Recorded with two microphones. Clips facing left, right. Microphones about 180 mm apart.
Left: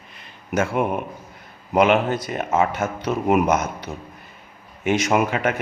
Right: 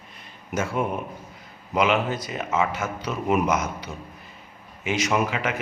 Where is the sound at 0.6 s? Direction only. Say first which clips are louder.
Left 4 dB; 65° left (ahead or behind).